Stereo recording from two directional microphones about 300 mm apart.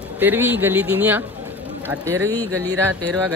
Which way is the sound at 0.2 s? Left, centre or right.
Centre.